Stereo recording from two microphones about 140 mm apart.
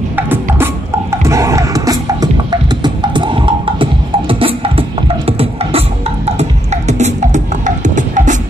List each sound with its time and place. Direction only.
1.2 s music: 20° right (ahead or behind); by 8.4 s 65° right (ahead or behind)